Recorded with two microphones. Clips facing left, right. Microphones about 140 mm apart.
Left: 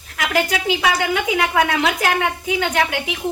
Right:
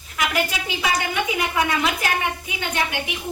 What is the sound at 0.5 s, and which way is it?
A woman's voice, 85° left.